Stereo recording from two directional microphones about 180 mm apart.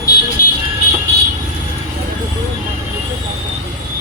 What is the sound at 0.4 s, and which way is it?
Vehicle, 55° left (ahead or behind).